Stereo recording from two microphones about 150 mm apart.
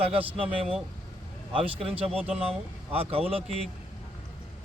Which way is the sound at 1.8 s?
40° right (ahead or behind).